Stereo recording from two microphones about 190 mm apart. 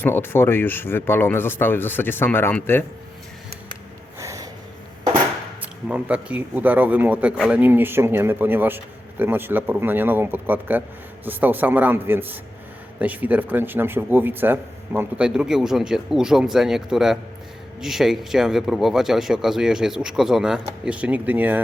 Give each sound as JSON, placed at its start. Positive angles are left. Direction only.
{"t": 0.0, "sound": "speech", "side_deg": 10}
{"t": 4.2, "sound": "snort", "side_deg": -15}
{"t": 5.9, "sound": "a man's voice", "side_deg": -5}